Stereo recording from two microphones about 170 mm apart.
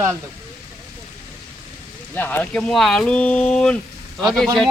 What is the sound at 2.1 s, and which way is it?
Speech, 10° left (ahead or behind).